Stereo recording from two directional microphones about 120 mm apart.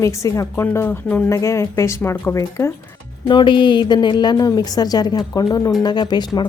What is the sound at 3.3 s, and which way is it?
A woman's voice, 40° left (ahead or behind).